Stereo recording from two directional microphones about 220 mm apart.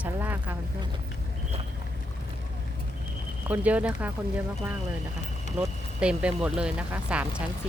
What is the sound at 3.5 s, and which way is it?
Speech, 5° right (ahead or behind).